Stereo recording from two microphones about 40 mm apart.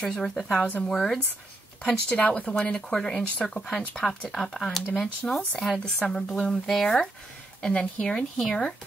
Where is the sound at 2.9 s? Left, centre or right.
Centre.